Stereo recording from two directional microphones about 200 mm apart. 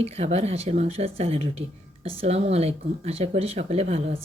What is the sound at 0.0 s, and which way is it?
Speech, 30° right (ahead or behind).